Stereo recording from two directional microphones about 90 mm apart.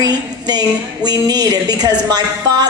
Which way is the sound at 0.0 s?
50° right (ahead or behind).